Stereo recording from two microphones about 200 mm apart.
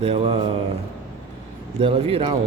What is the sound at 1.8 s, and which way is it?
Speech, 30° right (ahead or behind).